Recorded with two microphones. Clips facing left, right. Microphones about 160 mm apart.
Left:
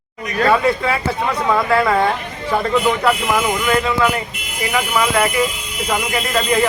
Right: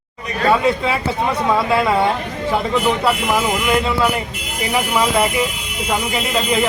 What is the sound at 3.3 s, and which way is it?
Speech, 20° right (ahead or behind).